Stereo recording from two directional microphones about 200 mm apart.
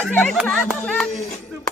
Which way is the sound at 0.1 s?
5° left (ahead or behind).